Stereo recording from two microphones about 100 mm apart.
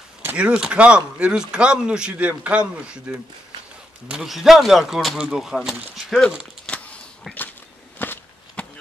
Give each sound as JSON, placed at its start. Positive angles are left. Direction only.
{"t": 0.2, "sound": "speech", "side_deg": -15}
{"t": 4.1, "sound": "speech", "side_deg": -5}
{"t": 8.0, "sound": "a sound", "side_deg": 20}